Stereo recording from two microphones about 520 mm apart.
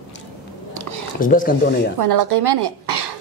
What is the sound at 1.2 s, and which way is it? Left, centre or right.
Speech, centre.